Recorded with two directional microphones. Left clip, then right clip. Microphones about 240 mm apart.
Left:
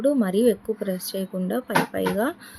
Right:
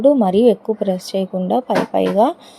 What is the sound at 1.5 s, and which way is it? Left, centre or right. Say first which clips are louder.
Speech: right 6 dB; centre.